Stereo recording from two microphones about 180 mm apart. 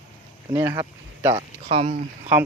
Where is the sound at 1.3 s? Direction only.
35° right (ahead or behind).